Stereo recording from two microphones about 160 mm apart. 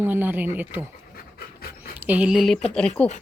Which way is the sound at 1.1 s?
70° left (ahead or behind).